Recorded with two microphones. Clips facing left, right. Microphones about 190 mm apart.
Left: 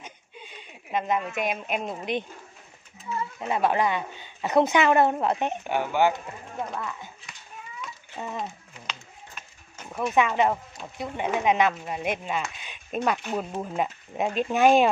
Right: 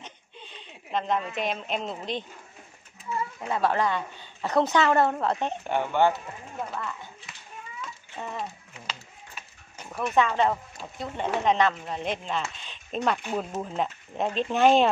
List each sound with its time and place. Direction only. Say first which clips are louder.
0.0 s a sound: left 1 dB; 10° left (ahead or behind)
1.4 s a woman's voice: left 1 dB; 10° left (ahead or behind)
3.3 s a woman's voice: left 2 dB; 15° left (ahead or behind)
5.6 s speech: right 1 dB; 5° left (ahead or behind)
8.2 s a woman's voice: left 1 dB; 15° left (ahead or behind)
8.8 s a sound: even; 5° right (ahead or behind)
10.0 s a woman's voice: left 1 dB; 15° left (ahead or behind)
13.2 s a woman's voice: even; 5° right (ahead or behind)